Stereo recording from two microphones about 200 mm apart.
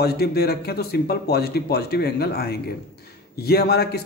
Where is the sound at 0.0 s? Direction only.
55° left (ahead or behind).